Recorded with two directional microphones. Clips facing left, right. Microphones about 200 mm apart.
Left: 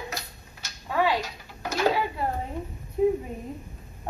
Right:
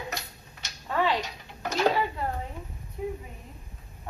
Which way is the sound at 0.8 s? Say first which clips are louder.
Left 2 dB; 10° left (ahead or behind).